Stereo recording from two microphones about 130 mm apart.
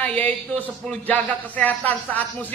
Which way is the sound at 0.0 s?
10° left (ahead or behind).